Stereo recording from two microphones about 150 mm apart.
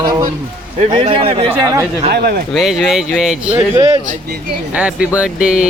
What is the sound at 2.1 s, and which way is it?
Speech, 90° right.